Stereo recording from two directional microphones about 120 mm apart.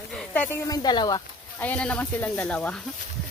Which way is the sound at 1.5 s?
15° left (ahead or behind).